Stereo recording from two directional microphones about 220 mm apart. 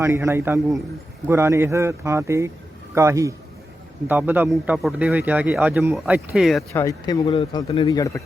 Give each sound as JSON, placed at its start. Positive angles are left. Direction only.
{"t": 0.0, "sound": "a man's voice", "side_deg": -10}
{"t": 6.7, "sound": "speech", "side_deg": 15}